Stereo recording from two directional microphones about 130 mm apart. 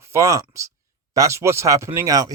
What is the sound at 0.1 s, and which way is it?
Speech, 25° right (ahead or behind).